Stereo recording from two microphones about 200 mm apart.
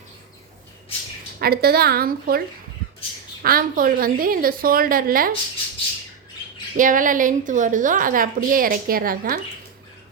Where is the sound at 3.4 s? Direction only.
45° right (ahead or behind).